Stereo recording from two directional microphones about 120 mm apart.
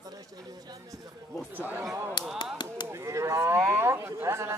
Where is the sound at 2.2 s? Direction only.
40° left (ahead or behind).